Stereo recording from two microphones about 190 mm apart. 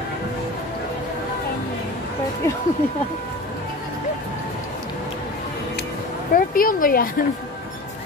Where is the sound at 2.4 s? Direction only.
15° left (ahead or behind).